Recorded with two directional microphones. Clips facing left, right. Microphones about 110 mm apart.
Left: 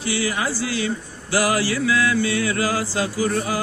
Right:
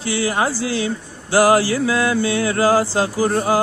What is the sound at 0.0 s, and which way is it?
Speech, 35° right (ahead or behind).